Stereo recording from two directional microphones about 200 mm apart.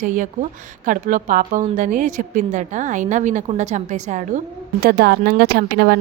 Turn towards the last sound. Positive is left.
turn(degrees=-50)  # may be behind; listen again after turning